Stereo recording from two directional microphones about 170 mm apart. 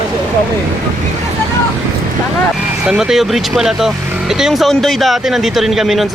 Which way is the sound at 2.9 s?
5° right (ahead or behind).